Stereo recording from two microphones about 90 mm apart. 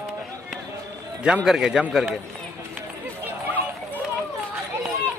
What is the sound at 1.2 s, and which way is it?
Speech, 10° right (ahead or behind).